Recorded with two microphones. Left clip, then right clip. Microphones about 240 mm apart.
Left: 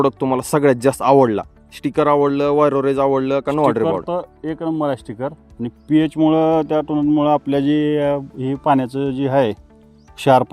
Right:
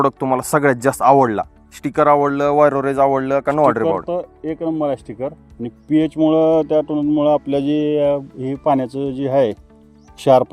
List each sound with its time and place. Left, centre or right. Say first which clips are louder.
0.0 s speech: right 1 dB; centre
0.6 s speech: left 1 dB; left
4.0 s speech: even; left